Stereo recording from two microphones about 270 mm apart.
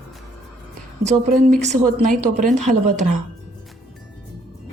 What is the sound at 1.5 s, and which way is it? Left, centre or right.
Speech, right.